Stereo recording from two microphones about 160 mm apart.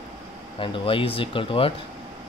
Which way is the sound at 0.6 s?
35° left (ahead or behind).